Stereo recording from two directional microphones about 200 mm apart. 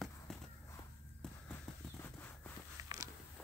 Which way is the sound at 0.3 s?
Centre (ahead or behind).